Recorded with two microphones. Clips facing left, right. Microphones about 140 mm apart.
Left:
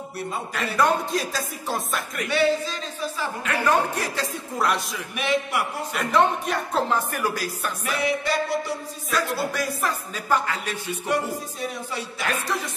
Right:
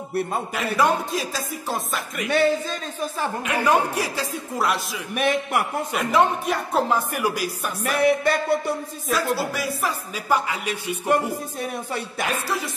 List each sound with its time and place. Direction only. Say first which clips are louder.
0.7 s speech: even; centre (ahead or behind)
2.2 s speech: right 2 dB; 50° right (ahead or behind)
3.4 s speech: right 1 dB; 15° right (ahead or behind)
5.1 s speech: right 3 dB; 50° right (ahead or behind)
5.9 s speech: right 1 dB; 5° right (ahead or behind)
7.9 s music: right 5 dB; 55° right (ahead or behind)
9.1 s speech: right 2 dB; centre (ahead or behind)
11.1 s speech: right 4 dB; 50° right (ahead or behind)
12.3 s speech: left 1 dB; 5° right (ahead or behind)